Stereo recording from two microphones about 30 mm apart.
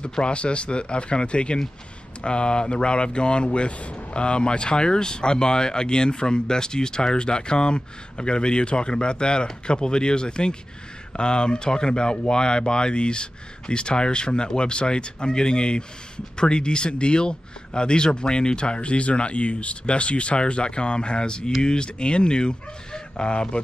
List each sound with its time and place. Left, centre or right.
0.2 s speech: left